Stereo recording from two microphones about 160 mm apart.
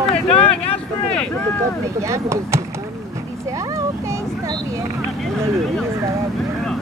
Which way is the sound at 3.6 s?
20° right (ahead or behind).